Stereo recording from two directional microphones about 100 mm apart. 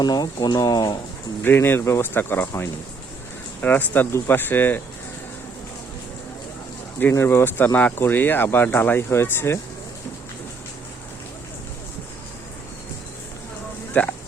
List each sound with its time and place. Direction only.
0.0 s speech: 40° left (ahead or behind)
1.5 s speech: 20° left (ahead or behind)
3.6 s speech: 15° left (ahead or behind)
7.0 s speech: 20° left (ahead or behind)
14.0 s speech: 15° left (ahead or behind)